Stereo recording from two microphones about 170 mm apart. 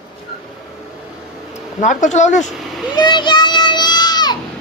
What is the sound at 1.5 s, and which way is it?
Speech, 45° left (ahead or behind).